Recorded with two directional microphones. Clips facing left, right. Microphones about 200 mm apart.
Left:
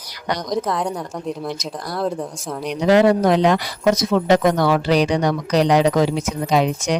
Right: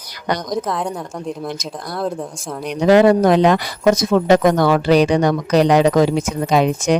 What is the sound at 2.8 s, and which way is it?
Speech, 50° right (ahead or behind).